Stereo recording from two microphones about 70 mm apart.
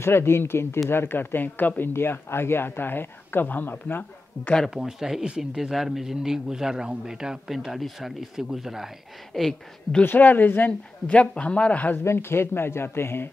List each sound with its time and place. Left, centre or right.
0.0 s speech: left
4.6 s speech: centre
10.0 s speech: left
12.0 s speech: left